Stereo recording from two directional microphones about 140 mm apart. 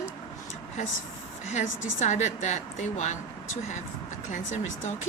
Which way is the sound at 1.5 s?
55° left (ahead or behind).